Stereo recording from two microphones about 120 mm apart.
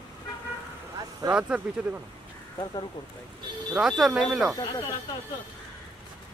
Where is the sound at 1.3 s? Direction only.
10° right (ahead or behind).